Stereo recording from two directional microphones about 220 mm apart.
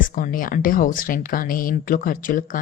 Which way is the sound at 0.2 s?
40° left (ahead or behind).